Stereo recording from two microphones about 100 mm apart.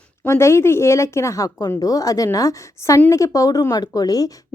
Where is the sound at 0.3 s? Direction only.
25° left (ahead or behind).